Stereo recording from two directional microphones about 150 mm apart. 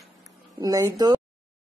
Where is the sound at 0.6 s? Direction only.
25° right (ahead or behind).